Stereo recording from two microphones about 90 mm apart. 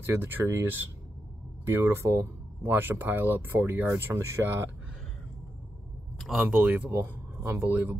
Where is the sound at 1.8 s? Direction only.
30° right (ahead or behind).